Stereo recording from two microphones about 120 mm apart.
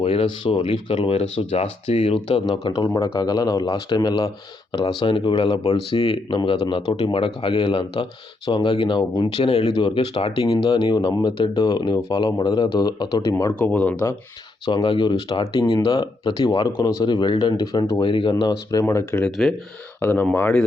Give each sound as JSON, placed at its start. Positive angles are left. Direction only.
{"t": 0.0, "sound": "speech", "side_deg": 55}
{"t": 3.2, "sound": "speech", "side_deg": 35}
{"t": 10.8, "sound": "speech", "side_deg": 35}
{"t": 11.6, "sound": "speech", "side_deg": 35}
{"t": 13.5, "sound": "speech", "side_deg": 10}
{"t": 14.6, "sound": "speech", "side_deg": 40}
{"t": 18.0, "sound": "speech", "side_deg": 45}